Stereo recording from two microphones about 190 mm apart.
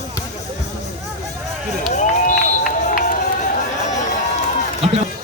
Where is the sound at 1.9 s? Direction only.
40° left (ahead or behind).